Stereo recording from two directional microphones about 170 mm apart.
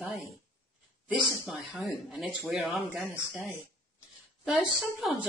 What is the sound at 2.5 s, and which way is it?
Speech, centre (ahead or behind).